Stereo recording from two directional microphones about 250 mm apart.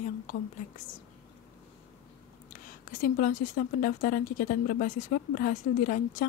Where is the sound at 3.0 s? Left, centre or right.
Left.